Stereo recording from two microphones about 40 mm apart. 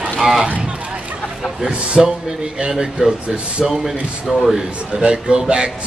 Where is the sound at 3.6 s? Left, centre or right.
Centre.